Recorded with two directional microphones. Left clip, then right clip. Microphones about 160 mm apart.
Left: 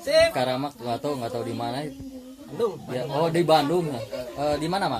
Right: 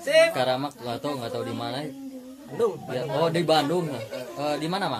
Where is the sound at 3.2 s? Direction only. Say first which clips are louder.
Left 2 dB; 30° left (ahead or behind).